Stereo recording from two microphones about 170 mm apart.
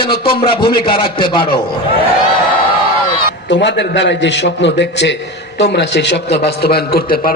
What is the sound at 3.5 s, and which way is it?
A man's voice, 90° left.